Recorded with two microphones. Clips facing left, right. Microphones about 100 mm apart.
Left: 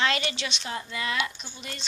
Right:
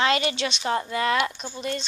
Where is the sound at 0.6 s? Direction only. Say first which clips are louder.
Right 10 dB; 50° right (ahead or behind).